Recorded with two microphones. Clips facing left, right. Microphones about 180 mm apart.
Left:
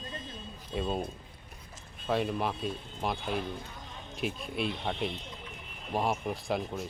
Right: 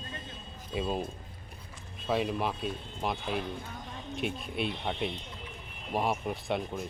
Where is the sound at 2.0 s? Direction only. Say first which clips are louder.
Even; centre (ahead or behind).